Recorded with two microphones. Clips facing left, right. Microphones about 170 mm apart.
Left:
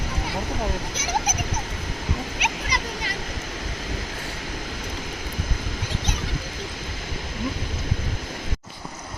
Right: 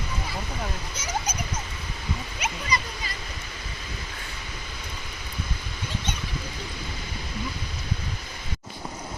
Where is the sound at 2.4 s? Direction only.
70° left (ahead or behind).